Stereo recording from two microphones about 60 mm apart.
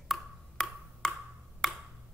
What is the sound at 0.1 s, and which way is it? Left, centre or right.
Wood block, centre.